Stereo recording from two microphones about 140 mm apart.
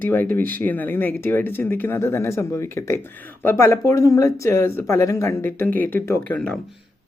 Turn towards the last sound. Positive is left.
turn(degrees=10)  # may be behind; listen again after turning